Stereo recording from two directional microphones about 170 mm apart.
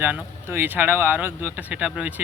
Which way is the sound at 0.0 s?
10° right (ahead or behind).